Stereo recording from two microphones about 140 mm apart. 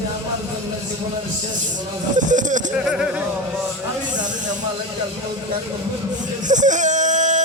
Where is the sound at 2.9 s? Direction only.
5° right (ahead or behind).